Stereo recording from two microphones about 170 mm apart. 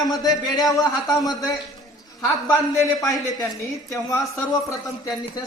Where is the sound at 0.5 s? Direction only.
20° left (ahead or behind).